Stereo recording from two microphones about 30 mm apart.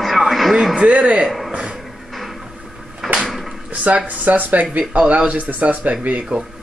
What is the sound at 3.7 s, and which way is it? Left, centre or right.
Speech, right.